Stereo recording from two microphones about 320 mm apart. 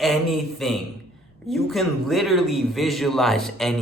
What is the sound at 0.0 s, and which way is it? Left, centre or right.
A man's voice, centre.